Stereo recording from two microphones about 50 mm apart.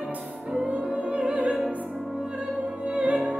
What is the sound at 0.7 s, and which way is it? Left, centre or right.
Music, right.